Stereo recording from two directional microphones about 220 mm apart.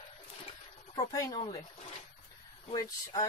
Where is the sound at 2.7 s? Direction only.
20° left (ahead or behind).